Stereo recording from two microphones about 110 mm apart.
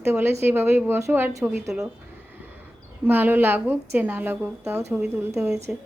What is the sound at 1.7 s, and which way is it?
Speech, 5° right (ahead or behind).